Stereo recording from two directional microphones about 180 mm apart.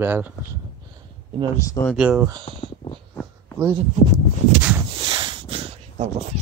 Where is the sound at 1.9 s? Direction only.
5° right (ahead or behind).